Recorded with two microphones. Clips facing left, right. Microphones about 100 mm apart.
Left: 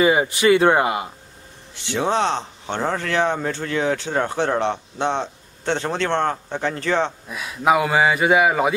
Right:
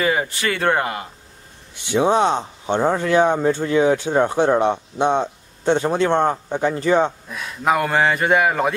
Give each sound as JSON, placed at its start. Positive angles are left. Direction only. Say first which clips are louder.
{"t": 0.0, "sound": "speech", "louder": "left 4 dB", "side_deg": 15}
{"t": 1.9, "sound": "speech", "louder": "right 4 dB", "side_deg": -15}
{"t": 7.2, "sound": "speech", "louder": "left 2 dB", "side_deg": 5}